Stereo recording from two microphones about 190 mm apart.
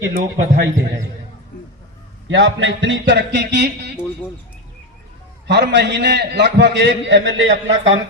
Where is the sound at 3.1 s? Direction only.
65° right (ahead or behind).